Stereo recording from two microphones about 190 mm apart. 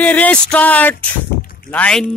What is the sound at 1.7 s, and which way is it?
Speech, 5° left (ahead or behind).